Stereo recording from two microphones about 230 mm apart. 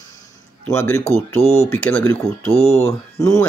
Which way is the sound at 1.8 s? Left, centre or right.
Centre.